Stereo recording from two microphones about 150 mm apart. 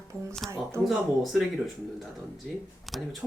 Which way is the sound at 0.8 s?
Centre (ahead or behind).